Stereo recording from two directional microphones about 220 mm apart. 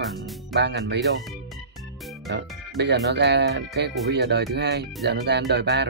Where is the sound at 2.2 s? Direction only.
50° right (ahead or behind).